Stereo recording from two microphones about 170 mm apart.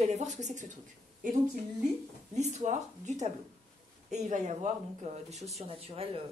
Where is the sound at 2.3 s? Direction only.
45° right (ahead or behind).